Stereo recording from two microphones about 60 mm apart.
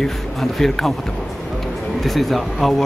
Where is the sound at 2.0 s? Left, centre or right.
Centre.